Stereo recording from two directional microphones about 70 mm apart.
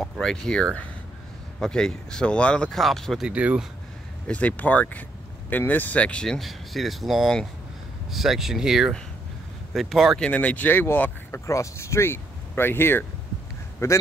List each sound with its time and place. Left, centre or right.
0.0 s speech: centre
2.7 s speech: centre
3.3 s speech: centre
4.3 s speech: left
6.2 s speech: centre
10.1 s speech: centre
11.3 s speech: left
13.8 s a man's voice: left